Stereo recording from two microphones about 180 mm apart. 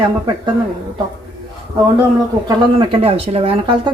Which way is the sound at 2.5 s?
30° right (ahead or behind).